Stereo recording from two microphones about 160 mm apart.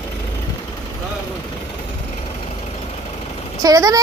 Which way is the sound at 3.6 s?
25° right (ahead or behind).